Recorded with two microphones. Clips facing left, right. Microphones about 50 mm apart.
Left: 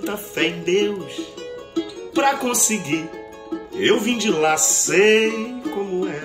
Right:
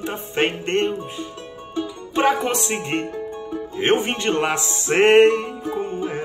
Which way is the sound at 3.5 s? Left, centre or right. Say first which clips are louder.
Left 1 dB; right.